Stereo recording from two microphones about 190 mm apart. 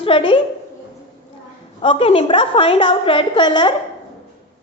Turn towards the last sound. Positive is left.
turn(degrees=25)  # may be behind; listen again after turning